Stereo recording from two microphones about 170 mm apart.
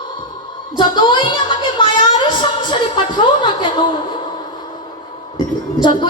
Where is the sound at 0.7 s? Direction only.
25° left (ahead or behind).